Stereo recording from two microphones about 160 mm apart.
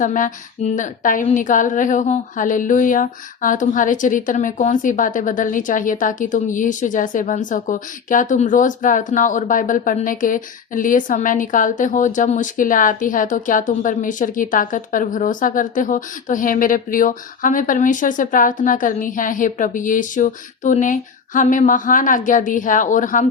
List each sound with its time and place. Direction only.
0.0 s a woman's voice: 55° left (ahead or behind)